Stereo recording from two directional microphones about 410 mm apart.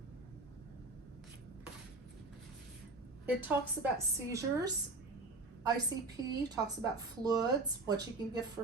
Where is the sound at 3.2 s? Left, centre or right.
Centre.